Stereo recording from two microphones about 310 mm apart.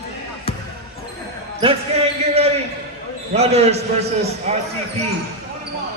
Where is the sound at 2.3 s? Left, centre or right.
Centre.